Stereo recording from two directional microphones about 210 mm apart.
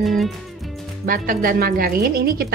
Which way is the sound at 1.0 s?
40° right (ahead or behind).